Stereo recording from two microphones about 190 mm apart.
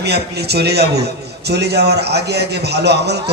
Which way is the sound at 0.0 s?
60° right (ahead or behind).